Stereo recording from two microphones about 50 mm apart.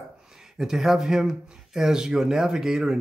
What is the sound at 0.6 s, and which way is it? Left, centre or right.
Speech, centre.